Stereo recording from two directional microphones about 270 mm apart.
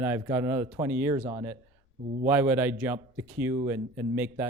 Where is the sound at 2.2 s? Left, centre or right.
Centre.